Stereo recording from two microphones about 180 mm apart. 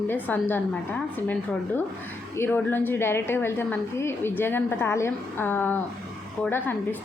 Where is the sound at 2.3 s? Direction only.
10° left (ahead or behind).